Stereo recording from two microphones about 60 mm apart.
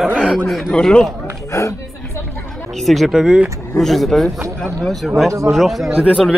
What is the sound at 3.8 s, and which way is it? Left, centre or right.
Speech, centre.